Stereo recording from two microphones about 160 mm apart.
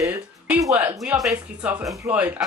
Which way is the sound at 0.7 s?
10° right (ahead or behind).